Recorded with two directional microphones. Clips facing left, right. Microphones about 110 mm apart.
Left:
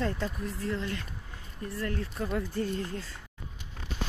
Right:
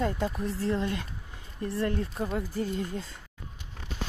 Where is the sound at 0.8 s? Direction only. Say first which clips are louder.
Right 4 dB; 20° right (ahead or behind).